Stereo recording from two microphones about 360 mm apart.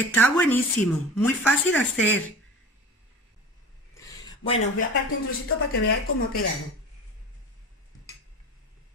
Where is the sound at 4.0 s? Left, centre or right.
Centre.